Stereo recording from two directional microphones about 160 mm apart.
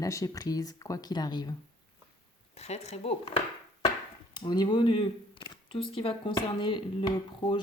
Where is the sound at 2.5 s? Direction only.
45° left (ahead or behind).